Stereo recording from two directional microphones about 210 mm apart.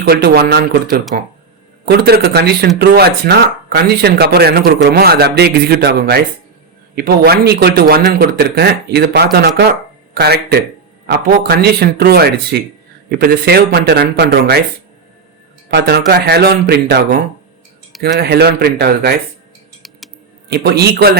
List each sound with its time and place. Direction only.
0.0 s speech: 50° right (ahead or behind)
15.7 s speech: 50° right (ahead or behind)
20.5 s speech: 50° right (ahead or behind)